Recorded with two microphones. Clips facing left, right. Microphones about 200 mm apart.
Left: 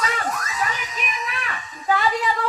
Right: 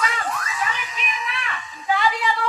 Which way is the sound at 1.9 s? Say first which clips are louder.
Left 1 dB; 40° left (ahead or behind).